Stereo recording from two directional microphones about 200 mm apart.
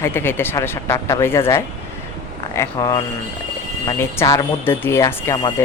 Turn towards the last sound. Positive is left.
turn(degrees=15)  # may be behind; listen again after turning